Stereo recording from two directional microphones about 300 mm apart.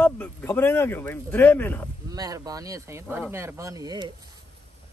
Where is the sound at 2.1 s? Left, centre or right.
Centre.